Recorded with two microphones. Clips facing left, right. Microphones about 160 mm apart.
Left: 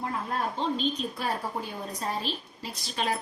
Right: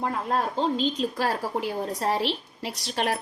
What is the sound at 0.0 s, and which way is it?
A woman's voice, 90° right.